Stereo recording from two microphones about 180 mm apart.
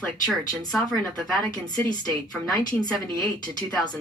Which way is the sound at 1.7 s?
20° left (ahead or behind).